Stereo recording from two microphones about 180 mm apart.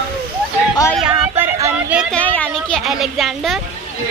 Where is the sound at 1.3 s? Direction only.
10° right (ahead or behind).